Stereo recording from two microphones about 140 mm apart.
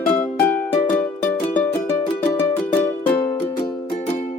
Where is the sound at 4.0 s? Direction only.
50° left (ahead or behind).